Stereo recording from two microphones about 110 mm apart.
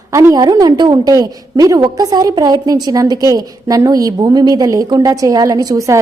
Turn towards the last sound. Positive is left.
turn(degrees=-30)  # may be behind; listen again after turning